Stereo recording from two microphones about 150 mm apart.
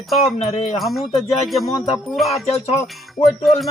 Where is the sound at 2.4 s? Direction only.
45° left (ahead or behind).